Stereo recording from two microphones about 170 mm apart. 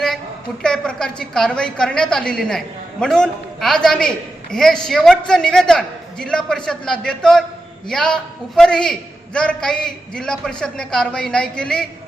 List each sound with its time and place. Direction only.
0.6 s a man's voice: 5° left (ahead or behind)